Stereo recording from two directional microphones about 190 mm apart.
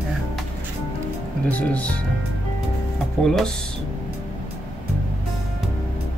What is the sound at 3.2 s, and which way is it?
Speech, centre (ahead or behind).